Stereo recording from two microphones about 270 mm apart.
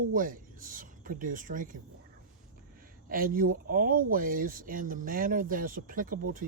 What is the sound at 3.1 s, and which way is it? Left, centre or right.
Speech, right.